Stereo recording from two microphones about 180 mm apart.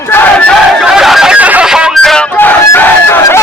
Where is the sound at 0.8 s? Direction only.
Centre (ahead or behind).